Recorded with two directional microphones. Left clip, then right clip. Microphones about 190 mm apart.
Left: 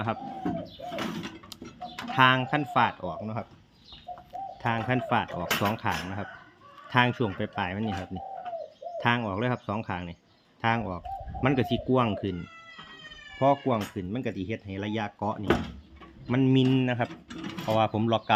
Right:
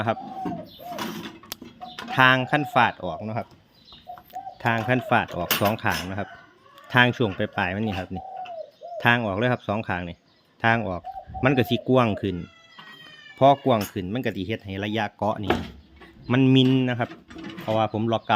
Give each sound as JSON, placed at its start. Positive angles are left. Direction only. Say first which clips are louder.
{"t": 2.0, "sound": "speech", "louder": "right 4 dB", "side_deg": -35}
{"t": 13.4, "sound": "speech", "louder": "right 6 dB", "side_deg": -50}